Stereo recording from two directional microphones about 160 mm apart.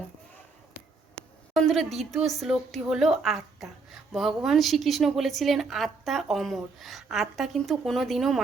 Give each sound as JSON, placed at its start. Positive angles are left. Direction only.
{"t": 1.5, "sound": "a woman's voice", "side_deg": 0}